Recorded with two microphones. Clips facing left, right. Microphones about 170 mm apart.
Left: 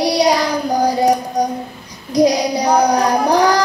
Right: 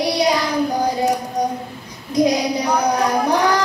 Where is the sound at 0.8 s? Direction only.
35° left (ahead or behind).